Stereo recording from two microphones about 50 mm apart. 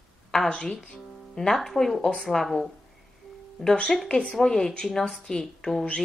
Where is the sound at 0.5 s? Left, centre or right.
Centre.